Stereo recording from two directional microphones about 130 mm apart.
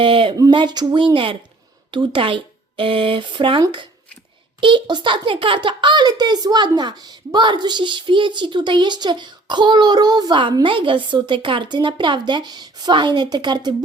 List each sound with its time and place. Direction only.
0.0 s a child's voice: 40° right (ahead or behind)